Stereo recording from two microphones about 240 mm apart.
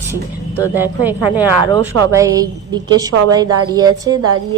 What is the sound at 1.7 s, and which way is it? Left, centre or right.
Speech, centre.